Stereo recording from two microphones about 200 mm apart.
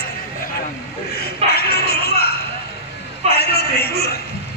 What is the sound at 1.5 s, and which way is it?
Music, 55° left (ahead or behind).